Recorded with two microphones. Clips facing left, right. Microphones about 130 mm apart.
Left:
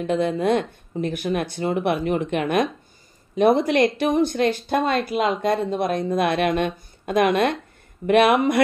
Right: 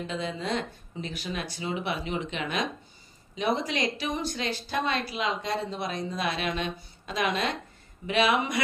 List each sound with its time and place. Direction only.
0.0 s speech: 60° left (ahead or behind)